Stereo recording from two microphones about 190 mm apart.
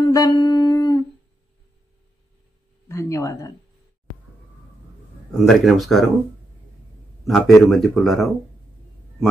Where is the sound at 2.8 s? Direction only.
15° left (ahead or behind).